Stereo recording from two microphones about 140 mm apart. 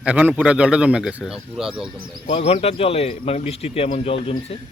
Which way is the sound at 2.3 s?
45° left (ahead or behind).